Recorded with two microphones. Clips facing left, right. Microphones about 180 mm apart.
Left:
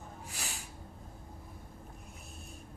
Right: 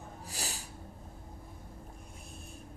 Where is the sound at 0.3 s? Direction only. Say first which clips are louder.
Right 5 dB; 35° right (ahead or behind).